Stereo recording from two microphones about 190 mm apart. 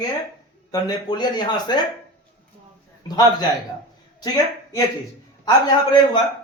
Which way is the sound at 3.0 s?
20° left (ahead or behind).